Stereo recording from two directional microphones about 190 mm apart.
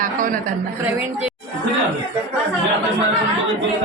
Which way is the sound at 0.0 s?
45° right (ahead or behind).